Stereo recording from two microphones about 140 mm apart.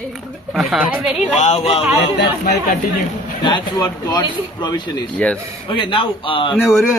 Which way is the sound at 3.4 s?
30° left (ahead or behind).